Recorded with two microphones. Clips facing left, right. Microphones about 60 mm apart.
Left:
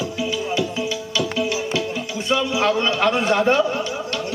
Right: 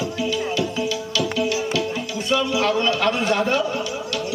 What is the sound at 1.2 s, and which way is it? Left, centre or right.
Music, left.